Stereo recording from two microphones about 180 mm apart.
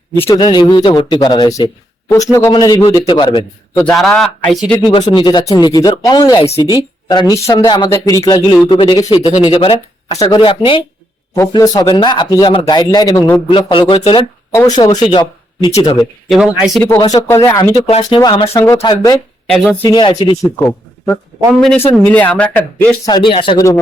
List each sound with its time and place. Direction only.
0.1 s a man's voice: 15° left (ahead or behind)
3.8 s speech: 5° left (ahead or behind)
4.9 s a man's voice: 25° left (ahead or behind)
6.4 s speech: 35° left (ahead or behind)
6.7 s a man's voice: 25° left (ahead or behind)
14.5 s a man's voice: 20° left (ahead or behind)
16.3 s speech: 5° right (ahead or behind)
17.0 s a man's voice: 20° left (ahead or behind)
19.5 s speech: 5° right (ahead or behind)
19.9 s a man's voice: 25° left (ahead or behind)
21.6 s speech: 5° left (ahead or behind)
23.0 s a man's voice: 25° left (ahead or behind)